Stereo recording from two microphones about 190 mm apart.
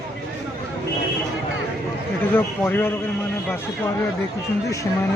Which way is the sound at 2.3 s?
10° left (ahead or behind).